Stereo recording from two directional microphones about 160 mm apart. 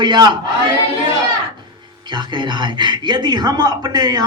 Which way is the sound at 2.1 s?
30° right (ahead or behind).